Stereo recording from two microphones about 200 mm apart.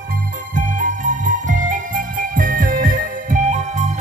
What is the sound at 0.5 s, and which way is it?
Music, 40° right (ahead or behind).